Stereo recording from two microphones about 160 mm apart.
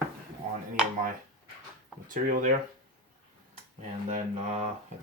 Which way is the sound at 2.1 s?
55° right (ahead or behind).